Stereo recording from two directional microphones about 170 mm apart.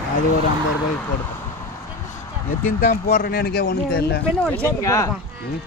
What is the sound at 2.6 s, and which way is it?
Speech, 55° left (ahead or behind).